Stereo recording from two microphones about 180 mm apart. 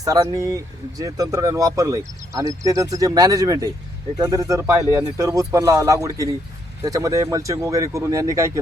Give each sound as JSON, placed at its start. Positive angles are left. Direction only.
{"t": 0.0, "sound": "speech", "side_deg": -20}